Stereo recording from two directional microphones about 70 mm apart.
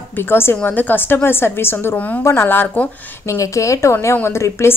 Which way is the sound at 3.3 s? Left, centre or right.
Left.